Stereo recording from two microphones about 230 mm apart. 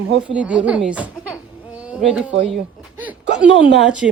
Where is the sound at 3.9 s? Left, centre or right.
Centre.